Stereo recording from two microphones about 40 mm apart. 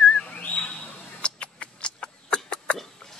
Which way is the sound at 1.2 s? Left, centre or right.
Left.